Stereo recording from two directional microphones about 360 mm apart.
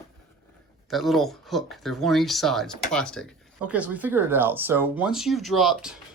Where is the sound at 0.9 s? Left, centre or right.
Centre.